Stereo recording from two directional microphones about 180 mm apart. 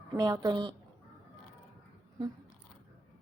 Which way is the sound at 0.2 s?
20° right (ahead or behind).